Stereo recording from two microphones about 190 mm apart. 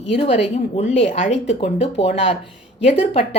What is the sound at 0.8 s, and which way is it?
Speech, 35° left (ahead or behind).